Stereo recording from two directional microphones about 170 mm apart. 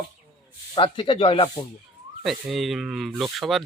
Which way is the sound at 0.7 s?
30° left (ahead or behind).